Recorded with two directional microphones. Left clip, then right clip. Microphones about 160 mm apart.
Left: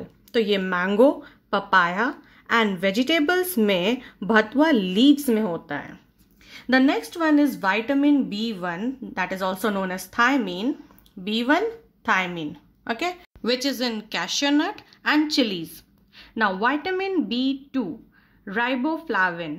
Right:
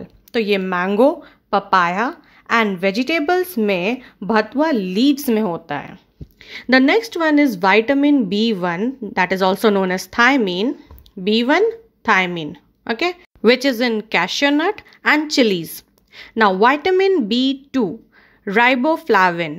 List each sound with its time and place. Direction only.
0.3 s a woman's voice: 20° right (ahead or behind)
5.1 s a woman's voice: 30° right (ahead or behind)
13.4 s speech: 50° right (ahead or behind)